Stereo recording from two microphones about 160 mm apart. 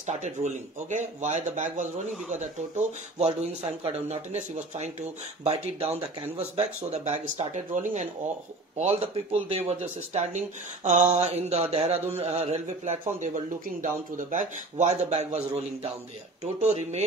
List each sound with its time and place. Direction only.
0.0 s speech: 45° right (ahead or behind)